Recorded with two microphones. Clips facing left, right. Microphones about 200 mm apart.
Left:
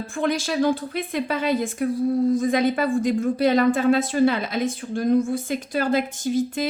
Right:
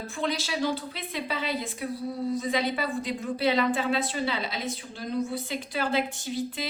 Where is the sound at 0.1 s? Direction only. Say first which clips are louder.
Left 7 dB; 50° left (ahead or behind).